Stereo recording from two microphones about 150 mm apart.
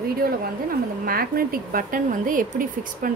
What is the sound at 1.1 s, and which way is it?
Speech, 75° right (ahead or behind).